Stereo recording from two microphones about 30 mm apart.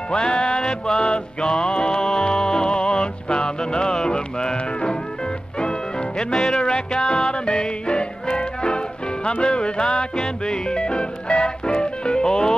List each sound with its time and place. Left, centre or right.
0.1 s music: left